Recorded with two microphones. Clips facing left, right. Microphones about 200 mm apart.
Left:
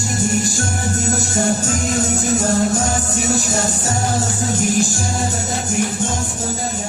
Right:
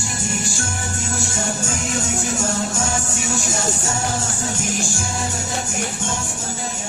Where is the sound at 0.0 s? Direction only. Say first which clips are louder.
Left 7 dB; 40° left (ahead or behind).